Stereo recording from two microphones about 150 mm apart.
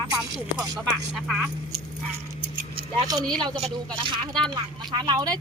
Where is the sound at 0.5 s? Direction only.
25° right (ahead or behind).